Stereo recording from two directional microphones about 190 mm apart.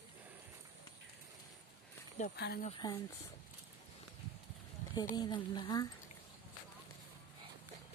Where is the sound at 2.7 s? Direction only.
25° left (ahead or behind).